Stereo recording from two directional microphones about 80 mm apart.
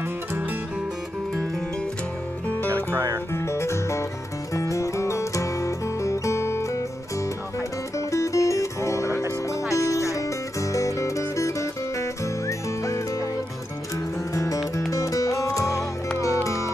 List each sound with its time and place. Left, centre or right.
2.7 s music: right
3.3 s music: left
8.1 s music: left
14.3 s music: left